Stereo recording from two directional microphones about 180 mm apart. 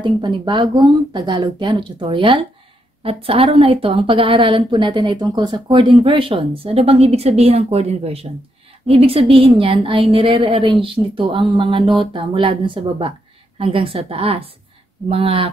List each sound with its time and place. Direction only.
0.0 s a woman's voice: 25° right (ahead or behind)